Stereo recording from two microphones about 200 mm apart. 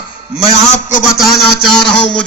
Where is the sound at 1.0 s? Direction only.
Centre (ahead or behind).